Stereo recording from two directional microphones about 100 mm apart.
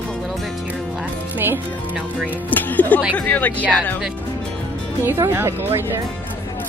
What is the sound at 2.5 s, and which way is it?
Speech, 15° left (ahead or behind).